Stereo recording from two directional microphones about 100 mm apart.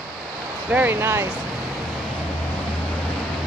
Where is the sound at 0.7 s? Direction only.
20° right (ahead or behind).